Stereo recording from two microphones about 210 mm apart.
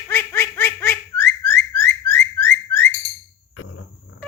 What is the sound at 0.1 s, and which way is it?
Baby laughter, 10° left (ahead or behind).